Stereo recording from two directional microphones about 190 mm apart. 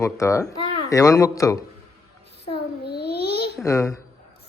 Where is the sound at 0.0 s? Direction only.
15° left (ahead or behind).